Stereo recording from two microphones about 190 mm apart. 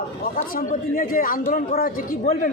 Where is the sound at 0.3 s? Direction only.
45° left (ahead or behind).